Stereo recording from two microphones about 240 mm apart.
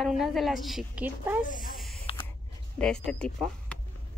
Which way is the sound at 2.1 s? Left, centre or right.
Left.